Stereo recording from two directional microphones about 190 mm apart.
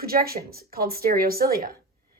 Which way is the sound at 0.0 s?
50° right (ahead or behind).